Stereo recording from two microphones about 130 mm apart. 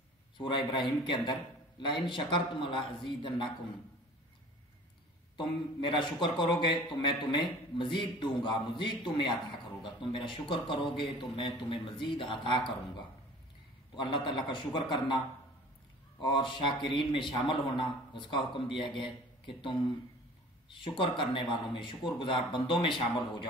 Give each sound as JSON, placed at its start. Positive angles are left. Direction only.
{"t": 0.4, "sound": "a man's voice", "side_deg": 35}
{"t": 5.4, "sound": "a man's voice", "side_deg": 40}
{"t": 16.2, "sound": "a man's voice", "side_deg": 40}
{"t": 20.7, "sound": "a man's voice", "side_deg": 40}